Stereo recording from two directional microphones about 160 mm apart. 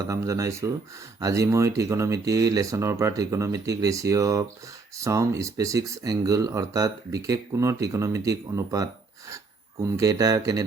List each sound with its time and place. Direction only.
0.0 s speech: 20° right (ahead or behind)